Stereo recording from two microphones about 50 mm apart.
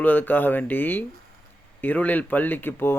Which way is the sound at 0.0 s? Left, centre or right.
Left.